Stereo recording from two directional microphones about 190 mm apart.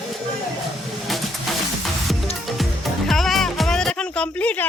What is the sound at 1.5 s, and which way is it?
Music, centre (ahead or behind).